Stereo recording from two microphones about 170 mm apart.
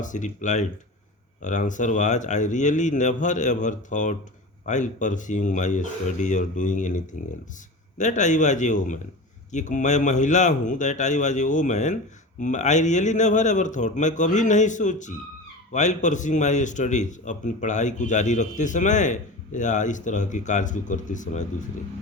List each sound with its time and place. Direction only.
0.0 s a man's voice: 45° left (ahead or behind)